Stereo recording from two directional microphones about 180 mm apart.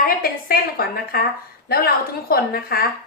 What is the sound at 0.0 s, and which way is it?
A woman's voice, 55° left (ahead or behind).